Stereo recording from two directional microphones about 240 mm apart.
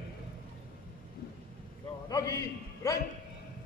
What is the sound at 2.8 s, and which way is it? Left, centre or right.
Bow-wow, centre.